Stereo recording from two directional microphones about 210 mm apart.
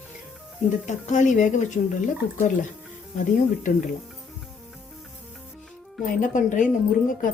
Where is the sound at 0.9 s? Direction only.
35° left (ahead or behind).